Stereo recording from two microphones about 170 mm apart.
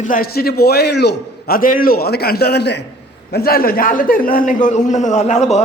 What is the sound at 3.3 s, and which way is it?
A man's voice, 65° left (ahead or behind).